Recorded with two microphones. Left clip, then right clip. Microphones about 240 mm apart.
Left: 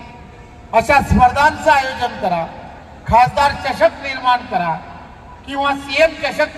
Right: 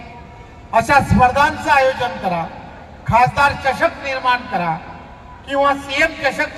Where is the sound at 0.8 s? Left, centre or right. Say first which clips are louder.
Left 1 dB; left.